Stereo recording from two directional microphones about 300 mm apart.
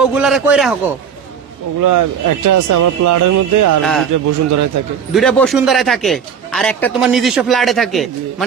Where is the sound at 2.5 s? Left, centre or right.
Right.